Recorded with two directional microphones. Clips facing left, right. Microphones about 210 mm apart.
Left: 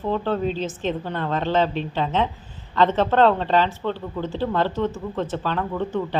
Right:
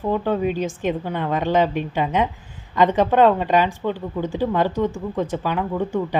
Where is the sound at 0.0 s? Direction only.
10° right (ahead or behind).